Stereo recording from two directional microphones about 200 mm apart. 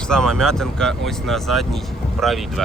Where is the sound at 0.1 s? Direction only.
5° left (ahead or behind).